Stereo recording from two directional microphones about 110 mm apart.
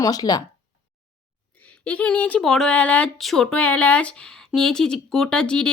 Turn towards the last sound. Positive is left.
turn(degrees=10)  # may be behind; listen again after turning